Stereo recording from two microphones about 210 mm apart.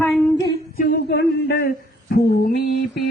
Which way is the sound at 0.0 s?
10° left (ahead or behind).